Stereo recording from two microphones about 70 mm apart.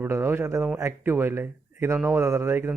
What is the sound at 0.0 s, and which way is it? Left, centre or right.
A man's voice, right.